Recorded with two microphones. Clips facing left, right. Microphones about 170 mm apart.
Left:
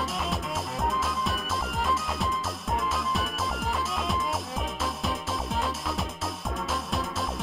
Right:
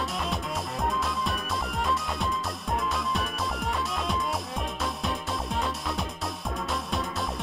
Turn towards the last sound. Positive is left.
turn(degrees=0)  # may be behind; listen again after turning